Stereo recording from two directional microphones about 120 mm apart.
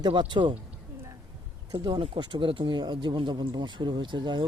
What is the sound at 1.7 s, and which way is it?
Speech, 35° right (ahead or behind).